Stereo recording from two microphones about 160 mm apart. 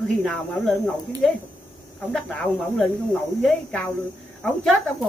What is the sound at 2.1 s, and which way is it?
A woman's voice, 5° left (ahead or behind).